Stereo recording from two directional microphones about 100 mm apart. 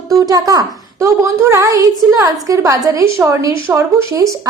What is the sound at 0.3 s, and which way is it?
A woman's voice, 40° right (ahead or behind).